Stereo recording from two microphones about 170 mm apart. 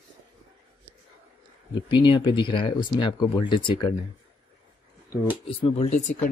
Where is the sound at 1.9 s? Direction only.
30° left (ahead or behind).